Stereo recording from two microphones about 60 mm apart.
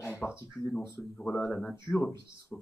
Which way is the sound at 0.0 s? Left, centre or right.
Left.